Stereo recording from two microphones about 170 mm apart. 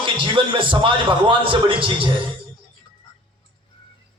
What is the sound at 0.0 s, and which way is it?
A man's voice, 30° right (ahead or behind).